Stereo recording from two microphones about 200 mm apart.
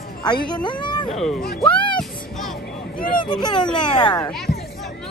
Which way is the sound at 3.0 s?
25° left (ahead or behind).